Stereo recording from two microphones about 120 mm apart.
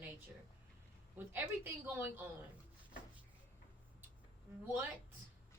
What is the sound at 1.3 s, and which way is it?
Speech, 15° right (ahead or behind).